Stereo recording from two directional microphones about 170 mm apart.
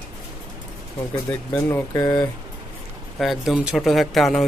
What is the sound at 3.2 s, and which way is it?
Speech, centre (ahead or behind).